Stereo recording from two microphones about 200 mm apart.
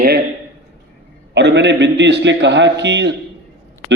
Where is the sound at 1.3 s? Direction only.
60° right (ahead or behind).